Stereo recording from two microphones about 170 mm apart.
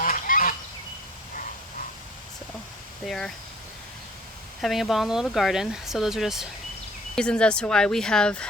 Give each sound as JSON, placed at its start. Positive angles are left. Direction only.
{"t": 0.0, "sound": "goose", "side_deg": 55}
{"t": 3.1, "sound": "speech", "side_deg": 5}
{"t": 4.6, "sound": "speech", "side_deg": 0}